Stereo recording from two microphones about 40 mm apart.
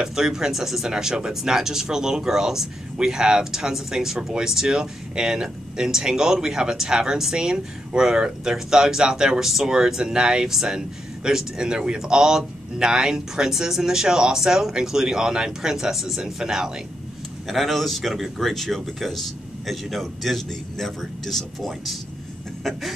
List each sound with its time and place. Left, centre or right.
0.0 s speech: centre
17.5 s speech: centre
22.6 s a sound: centre